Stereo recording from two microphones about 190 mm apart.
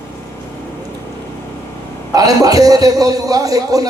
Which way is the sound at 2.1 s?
20° right (ahead or behind).